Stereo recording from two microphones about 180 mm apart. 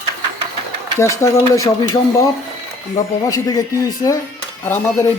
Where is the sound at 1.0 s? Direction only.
15° left (ahead or behind).